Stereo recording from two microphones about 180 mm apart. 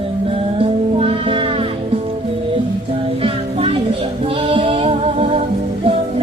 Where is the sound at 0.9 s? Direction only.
30° right (ahead or behind).